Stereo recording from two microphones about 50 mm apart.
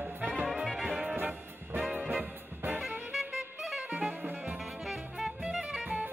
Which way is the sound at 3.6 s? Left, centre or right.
Centre.